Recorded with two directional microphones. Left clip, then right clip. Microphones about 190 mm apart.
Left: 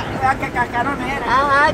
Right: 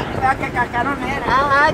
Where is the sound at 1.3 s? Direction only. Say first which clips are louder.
Even; 5° right (ahead or behind).